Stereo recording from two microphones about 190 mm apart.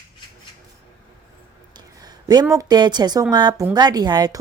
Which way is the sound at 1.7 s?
20° right (ahead or behind).